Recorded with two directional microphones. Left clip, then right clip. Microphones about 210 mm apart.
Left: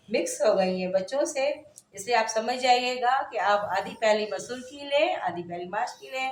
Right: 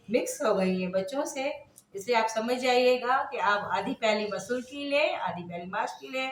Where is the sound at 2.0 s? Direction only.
30° left (ahead or behind).